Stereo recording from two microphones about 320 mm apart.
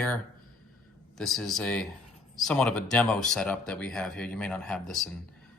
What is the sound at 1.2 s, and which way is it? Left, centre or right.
A man's voice, centre.